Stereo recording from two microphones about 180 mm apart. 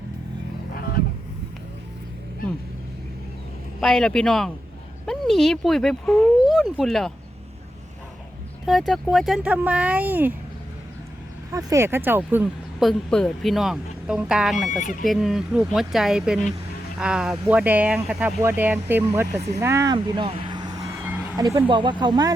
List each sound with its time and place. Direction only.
0.7 s a sound: 55° left (ahead or behind)
3.8 s speech: centre (ahead or behind)
8.9 s speech: centre (ahead or behind)
11.5 s speech: 15° right (ahead or behind)
12.8 s speech: 5° left (ahead or behind)
14.8 s speech: 45° left (ahead or behind)
15.0 s speech: centre (ahead or behind)
19.5 s vehicle: 15° right (ahead or behind)
21.3 s speech: 15° right (ahead or behind)